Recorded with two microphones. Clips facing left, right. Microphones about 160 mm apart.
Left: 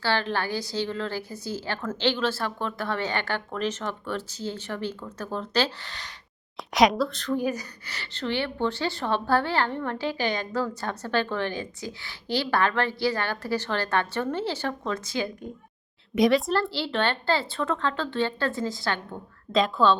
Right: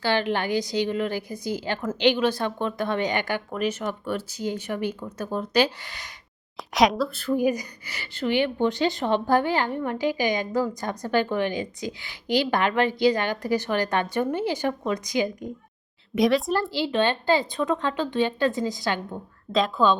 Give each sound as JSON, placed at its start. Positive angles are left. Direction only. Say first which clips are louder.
{"t": 0.0, "sound": "speech", "louder": "right 3 dB", "side_deg": -15}
{"t": 6.6, "sound": "speech", "louder": "even", "side_deg": 0}
{"t": 16.1, "sound": "speech", "louder": "even", "side_deg": 0}
{"t": 16.5, "sound": "speech", "louder": "right 2 dB", "side_deg": -15}
{"t": 19.5, "sound": "speech", "louder": "even", "side_deg": 0}